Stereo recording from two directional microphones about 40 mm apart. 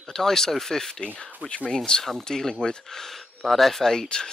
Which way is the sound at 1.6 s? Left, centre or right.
Centre.